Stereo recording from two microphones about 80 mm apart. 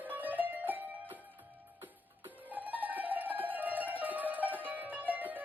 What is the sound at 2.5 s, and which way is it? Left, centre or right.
Mandolin, right.